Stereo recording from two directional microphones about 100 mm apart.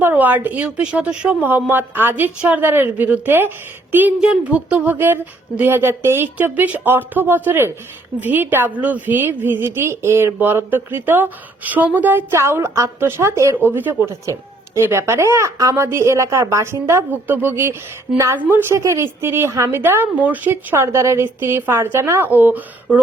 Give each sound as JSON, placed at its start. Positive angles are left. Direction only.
{"t": 0.0, "sound": "a woman's voice", "side_deg": -15}